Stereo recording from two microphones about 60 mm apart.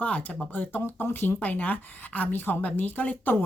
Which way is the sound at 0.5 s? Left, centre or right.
Left.